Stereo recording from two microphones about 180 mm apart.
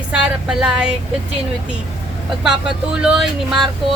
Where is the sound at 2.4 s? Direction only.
5° right (ahead or behind).